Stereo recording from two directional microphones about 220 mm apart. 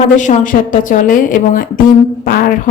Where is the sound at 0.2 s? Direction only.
35° left (ahead or behind).